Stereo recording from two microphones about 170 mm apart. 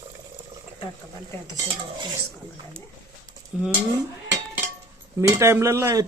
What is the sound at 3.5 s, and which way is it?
Speech, 5° right (ahead or behind).